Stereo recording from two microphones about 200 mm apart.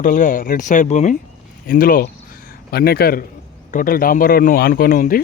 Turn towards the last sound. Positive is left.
turn(degrees=45)  # may be behind; listen again after turning